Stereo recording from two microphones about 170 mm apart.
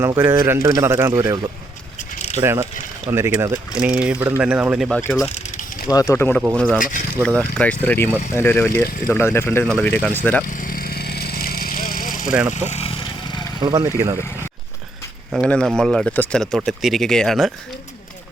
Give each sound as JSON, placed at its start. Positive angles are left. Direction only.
{"t": 0.0, "sound": "a man's voice", "side_deg": -15}
{"t": 2.0, "sound": "keys jangling", "side_deg": 40}
{"t": 2.4, "sound": "a man's voice", "side_deg": -15}
{"t": 5.9, "sound": "speech", "side_deg": 20}
{"t": 6.7, "sound": "speech", "side_deg": 50}
{"t": 7.3, "sound": "speech", "side_deg": 10}
{"t": 10.4, "sound": "vehicle", "side_deg": 55}
{"t": 12.5, "sound": "vehicle", "side_deg": 40}
{"t": 13.6, "sound": "speech", "side_deg": -30}
{"t": 13.9, "sound": "a man's voice", "side_deg": -20}
{"t": 15.4, "sound": "speech", "side_deg": 5}